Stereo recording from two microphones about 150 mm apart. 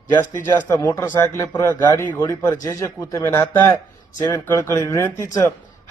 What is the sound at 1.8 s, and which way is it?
A man's voice, 25° left (ahead or behind).